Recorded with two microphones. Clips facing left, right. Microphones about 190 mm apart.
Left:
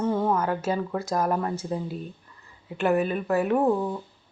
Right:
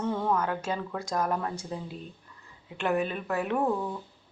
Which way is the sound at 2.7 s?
5° left (ahead or behind).